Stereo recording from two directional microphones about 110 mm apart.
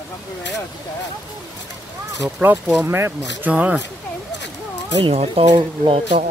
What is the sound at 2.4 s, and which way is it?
Speech, 15° right (ahead or behind).